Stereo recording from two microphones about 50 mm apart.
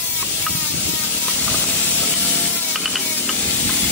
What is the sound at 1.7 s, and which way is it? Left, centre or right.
Steam, left.